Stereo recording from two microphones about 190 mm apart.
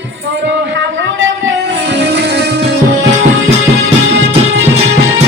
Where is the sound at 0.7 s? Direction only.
85° right; by 2.5 s 60° right (ahead or behind).